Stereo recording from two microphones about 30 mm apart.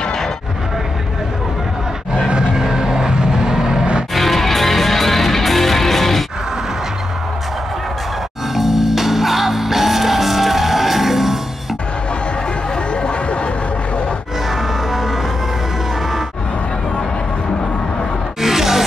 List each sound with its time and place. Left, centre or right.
2.2 s vehicle: right
4.1 s music: centre
8.5 s music: centre
18.4 s music: centre